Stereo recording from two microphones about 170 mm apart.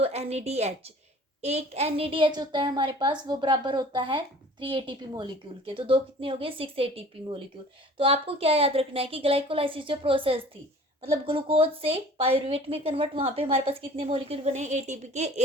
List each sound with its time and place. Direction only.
0.0 s a woman's voice: 40° right (ahead or behind)